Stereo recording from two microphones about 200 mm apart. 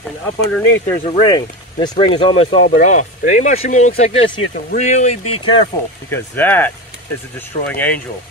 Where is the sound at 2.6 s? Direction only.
40° left (ahead or behind).